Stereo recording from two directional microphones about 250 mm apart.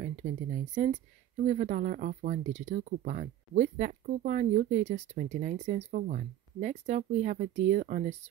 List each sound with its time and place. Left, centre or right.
0.0 s speech: right